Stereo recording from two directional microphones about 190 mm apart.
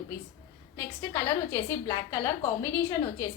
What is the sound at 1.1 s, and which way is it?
A woman's voice, 15° left (ahead or behind).